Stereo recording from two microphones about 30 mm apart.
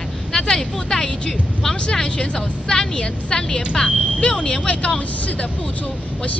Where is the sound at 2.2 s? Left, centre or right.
Left.